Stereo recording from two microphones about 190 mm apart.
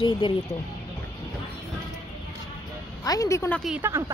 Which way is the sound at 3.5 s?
Centre (ahead or behind).